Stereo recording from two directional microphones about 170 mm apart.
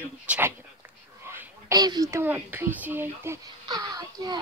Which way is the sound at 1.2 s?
15° right (ahead or behind).